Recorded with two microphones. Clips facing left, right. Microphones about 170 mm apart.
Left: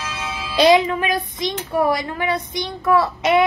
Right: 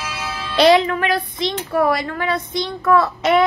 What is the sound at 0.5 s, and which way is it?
Speech, 15° left (ahead or behind).